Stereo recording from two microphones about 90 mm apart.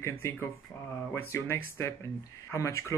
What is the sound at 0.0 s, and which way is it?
Speech, 30° left (ahead or behind).